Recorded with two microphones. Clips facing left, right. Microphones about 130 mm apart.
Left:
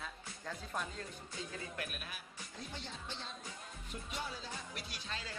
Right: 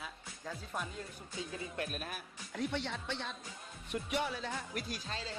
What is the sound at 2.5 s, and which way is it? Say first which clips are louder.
Speech: right 11 dB; 70° right (ahead or behind).